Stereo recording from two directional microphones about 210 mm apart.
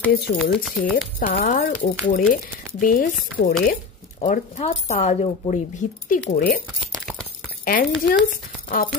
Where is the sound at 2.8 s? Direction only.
40° left (ahead or behind).